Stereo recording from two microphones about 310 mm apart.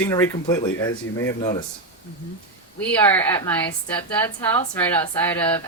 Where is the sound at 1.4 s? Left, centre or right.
Left.